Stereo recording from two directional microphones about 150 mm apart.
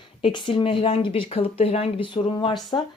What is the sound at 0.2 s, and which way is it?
Speech, 30° left (ahead or behind).